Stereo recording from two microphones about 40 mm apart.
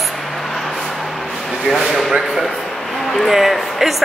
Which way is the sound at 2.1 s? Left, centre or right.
Centre.